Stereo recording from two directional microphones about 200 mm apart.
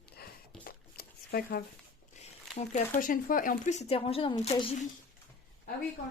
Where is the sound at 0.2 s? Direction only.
50° left (ahead or behind).